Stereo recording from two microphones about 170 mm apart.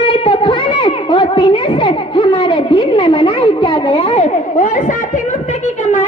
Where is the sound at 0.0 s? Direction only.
35° left (ahead or behind).